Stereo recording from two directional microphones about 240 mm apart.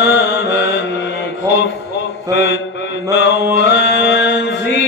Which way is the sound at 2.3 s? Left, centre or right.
Left.